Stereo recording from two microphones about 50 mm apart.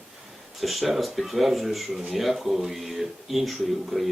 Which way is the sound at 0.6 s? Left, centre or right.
Centre.